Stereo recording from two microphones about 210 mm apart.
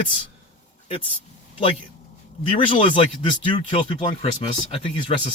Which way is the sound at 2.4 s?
25° left (ahead or behind).